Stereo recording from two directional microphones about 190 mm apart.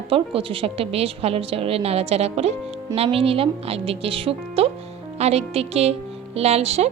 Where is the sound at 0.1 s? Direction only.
30° right (ahead or behind).